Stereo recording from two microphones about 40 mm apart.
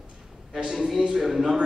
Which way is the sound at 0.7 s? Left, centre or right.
Centre.